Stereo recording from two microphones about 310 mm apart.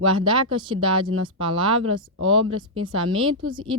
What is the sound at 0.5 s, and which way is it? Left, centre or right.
Speech, centre.